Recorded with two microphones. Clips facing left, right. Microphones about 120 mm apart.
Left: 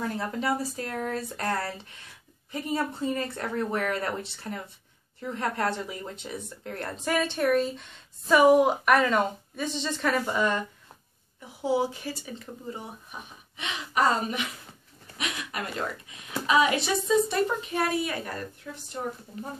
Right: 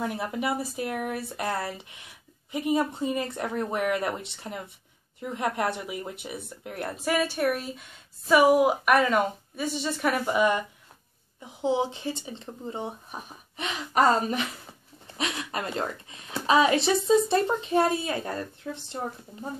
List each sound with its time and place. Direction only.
0.0 s a woman's voice: 15° right (ahead or behind)
11.6 s speech: 20° right (ahead or behind)
13.6 s a woman's voice: 40° right (ahead or behind)
18.6 s speech: 40° right (ahead or behind)